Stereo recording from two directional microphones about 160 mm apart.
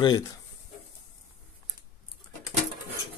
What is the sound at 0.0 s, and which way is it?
Speech, 25° left (ahead or behind).